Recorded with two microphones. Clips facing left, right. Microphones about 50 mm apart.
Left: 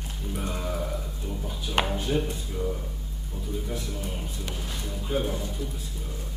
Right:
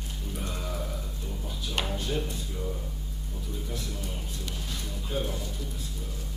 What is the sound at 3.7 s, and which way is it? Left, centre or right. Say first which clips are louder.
Music: left 3 dB; centre.